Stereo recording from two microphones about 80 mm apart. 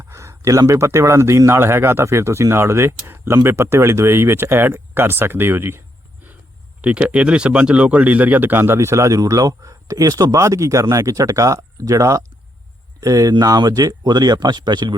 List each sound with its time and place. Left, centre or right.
0.0 s a sound: right
0.7 s speech: right
6.8 s speech: centre; by 14.9 s right